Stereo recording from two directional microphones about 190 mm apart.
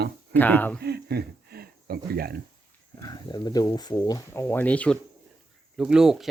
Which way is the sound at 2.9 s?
20° left (ahead or behind).